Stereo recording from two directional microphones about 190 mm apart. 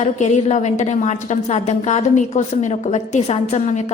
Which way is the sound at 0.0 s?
35° left (ahead or behind).